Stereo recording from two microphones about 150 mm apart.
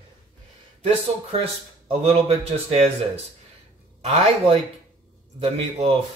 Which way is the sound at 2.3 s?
40° right (ahead or behind).